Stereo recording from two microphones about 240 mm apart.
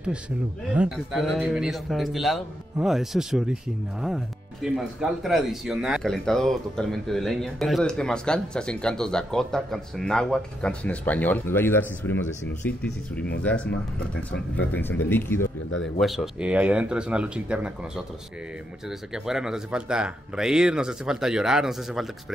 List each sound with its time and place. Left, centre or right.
0.7 s speech: centre
14.7 s speech: centre
15.4 s speech: left
16.0 s speech: centre